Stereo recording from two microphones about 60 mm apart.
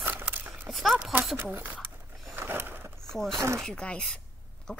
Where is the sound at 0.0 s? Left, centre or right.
Right.